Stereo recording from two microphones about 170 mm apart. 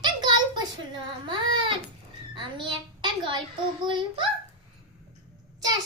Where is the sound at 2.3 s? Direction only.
30° right (ahead or behind).